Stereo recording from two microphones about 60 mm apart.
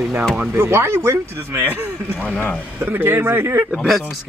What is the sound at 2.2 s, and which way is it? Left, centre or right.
Speech, left.